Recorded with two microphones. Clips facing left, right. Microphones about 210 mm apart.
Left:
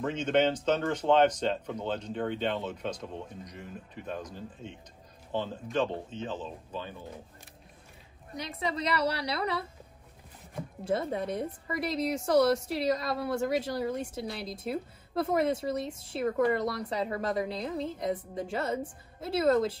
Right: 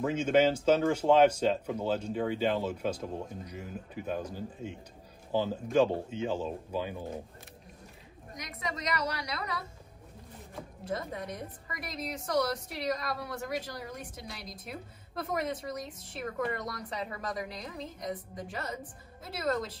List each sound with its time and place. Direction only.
0.0 s speech: 10° right (ahead or behind)
8.4 s a woman's voice: 30° left (ahead or behind)
10.8 s a woman's voice: 30° left (ahead or behind)